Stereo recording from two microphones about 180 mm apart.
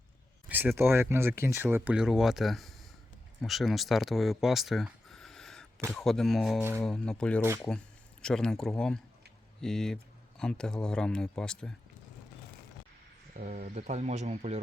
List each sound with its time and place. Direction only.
0.4 s a sound: 10° right (ahead or behind)
0.8 s speech: 15° right (ahead or behind); by 11.7 s 5° left (ahead or behind)
13.3 s speech: 50° right (ahead or behind)